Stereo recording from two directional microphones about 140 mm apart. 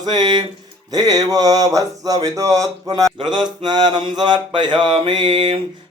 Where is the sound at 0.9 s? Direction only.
25° right (ahead or behind).